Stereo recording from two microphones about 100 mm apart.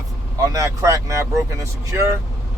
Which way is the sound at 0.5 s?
30° right (ahead or behind).